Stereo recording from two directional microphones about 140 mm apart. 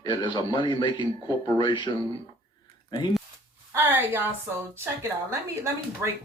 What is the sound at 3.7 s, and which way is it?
A woman's voice, 15° right (ahead or behind).